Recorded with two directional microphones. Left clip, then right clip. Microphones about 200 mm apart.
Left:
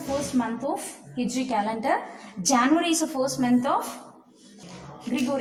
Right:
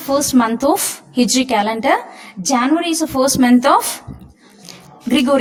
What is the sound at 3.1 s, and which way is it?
Speech, 35° right (ahead or behind).